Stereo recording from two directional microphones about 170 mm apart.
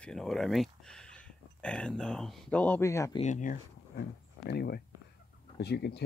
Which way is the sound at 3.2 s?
50° left (ahead or behind).